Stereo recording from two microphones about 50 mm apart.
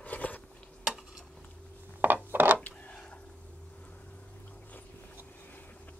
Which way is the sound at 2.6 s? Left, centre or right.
Left.